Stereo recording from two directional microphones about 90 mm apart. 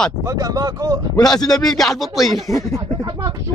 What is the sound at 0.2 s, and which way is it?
Speech, 40° right (ahead or behind).